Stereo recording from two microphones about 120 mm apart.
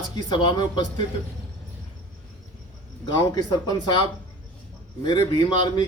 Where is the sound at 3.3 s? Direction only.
35° left (ahead or behind).